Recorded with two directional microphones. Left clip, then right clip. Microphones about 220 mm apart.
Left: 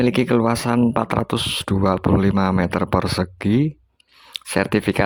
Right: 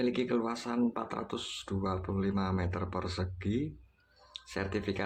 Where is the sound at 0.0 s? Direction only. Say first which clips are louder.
Left 14 dB; 50° left (ahead or behind).